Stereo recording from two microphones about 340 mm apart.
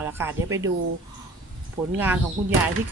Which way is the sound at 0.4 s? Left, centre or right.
Right.